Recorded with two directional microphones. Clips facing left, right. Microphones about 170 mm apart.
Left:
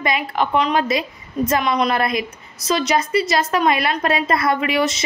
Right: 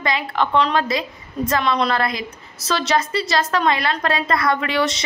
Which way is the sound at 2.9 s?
20° left (ahead or behind).